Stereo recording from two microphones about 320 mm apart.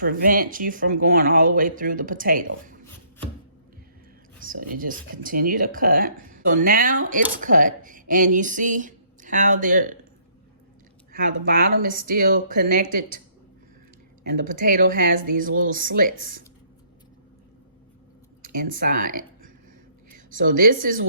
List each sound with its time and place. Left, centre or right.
0.0 s speech: right
4.4 s speech: right
11.1 s speech: right
14.3 s speech: right
18.4 s speech: right
20.1 s speech: right